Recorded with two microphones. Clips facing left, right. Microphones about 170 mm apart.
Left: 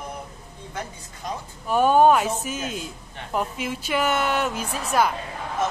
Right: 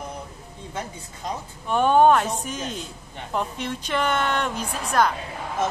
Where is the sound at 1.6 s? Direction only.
5° left (ahead or behind).